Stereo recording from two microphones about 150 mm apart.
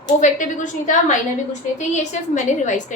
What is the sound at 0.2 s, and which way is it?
A woman's voice, 55° left (ahead or behind).